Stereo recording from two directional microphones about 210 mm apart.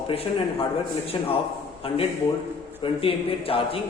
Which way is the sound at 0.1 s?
25° left (ahead or behind).